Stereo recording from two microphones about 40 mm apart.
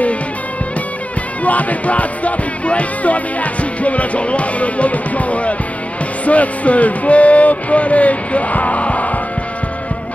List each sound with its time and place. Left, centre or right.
1.4 s music: left